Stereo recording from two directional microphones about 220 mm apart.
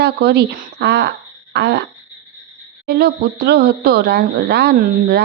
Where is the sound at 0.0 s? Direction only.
50° right (ahead or behind).